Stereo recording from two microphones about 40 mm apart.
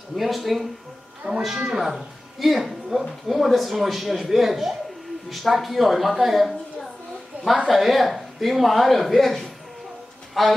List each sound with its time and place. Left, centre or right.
0.1 s speech: centre
1.4 s speech: centre
1.8 s speech: centre
7.6 s speech: centre